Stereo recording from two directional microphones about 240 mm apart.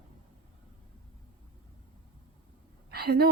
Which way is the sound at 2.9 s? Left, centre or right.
Right.